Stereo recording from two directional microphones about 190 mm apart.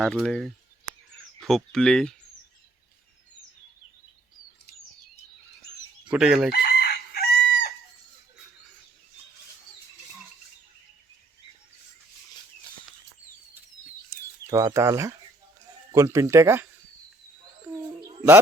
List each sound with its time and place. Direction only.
0.0 s speech: centre (ahead or behind)
6.1 s speech: 5° right (ahead or behind)
6.5 s chicken: 55° left (ahead or behind)
14.4 s speech: 15° right (ahead or behind)
18.0 s bird: 15° right (ahead or behind)